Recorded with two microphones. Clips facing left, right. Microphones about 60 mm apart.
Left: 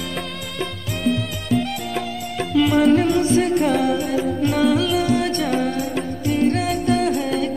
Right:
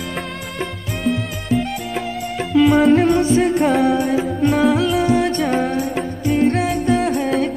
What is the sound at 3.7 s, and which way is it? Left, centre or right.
Music, right.